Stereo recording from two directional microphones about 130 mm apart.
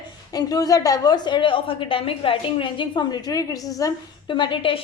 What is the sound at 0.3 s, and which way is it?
A woman's voice, 30° left (ahead or behind).